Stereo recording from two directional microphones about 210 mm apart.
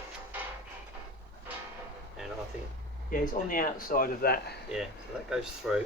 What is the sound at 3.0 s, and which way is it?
Speech, 40° left (ahead or behind).